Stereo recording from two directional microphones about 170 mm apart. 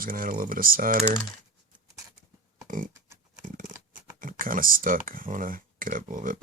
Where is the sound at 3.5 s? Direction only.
55° right (ahead or behind).